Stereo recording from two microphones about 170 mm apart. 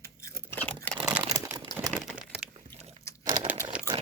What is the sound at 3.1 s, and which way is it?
Crumpling, 15° left (ahead or behind).